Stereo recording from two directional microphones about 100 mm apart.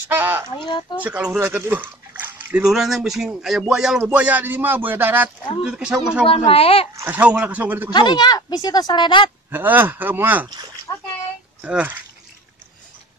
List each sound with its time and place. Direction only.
0.1 s speech: 20° right (ahead or behind)
0.6 s speech: 50° left (ahead or behind)
0.9 s speech: 15° right (ahead or behind)
2.6 s a man's voice: 5° right (ahead or behind); by 5.3 s 20° right (ahead or behind)
5.6 s speech: 5° right (ahead or behind)
6.2 s speech: 70° left (ahead or behind)
7.1 s speech: 15° right (ahead or behind)
7.9 s speech: 45° left (ahead or behind)
9.5 s a man's voice: 20° right (ahead or behind)
10.9 s bathtub: 35° left (ahead or behind)
11.6 s speech: 15° right (ahead or behind)